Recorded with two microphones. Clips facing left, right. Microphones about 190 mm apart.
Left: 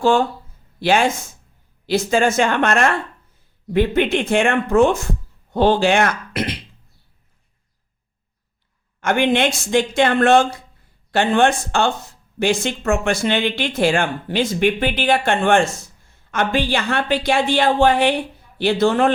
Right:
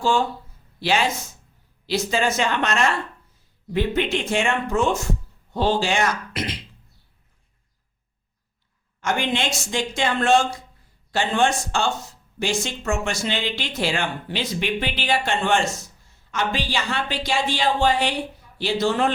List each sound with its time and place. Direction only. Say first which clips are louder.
0.0 s speech: left 5 dB; 55° left (ahead or behind)
9.0 s speech: left 7 dB; 60° left (ahead or behind)